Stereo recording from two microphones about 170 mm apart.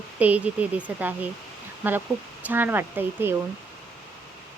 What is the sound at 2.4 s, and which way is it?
Speech, 10° right (ahead or behind).